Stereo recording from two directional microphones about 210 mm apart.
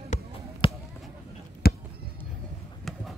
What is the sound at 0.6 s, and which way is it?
Basketball bounce, 25° left (ahead or behind).